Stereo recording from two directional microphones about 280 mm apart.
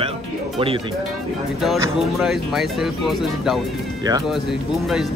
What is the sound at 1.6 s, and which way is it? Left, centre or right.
Speech, centre.